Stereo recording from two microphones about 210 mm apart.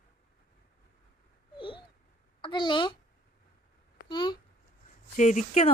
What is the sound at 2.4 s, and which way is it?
Speech, 20° left (ahead or behind).